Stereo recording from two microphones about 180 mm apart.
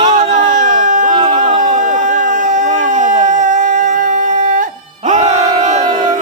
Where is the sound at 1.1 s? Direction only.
25° right (ahead or behind).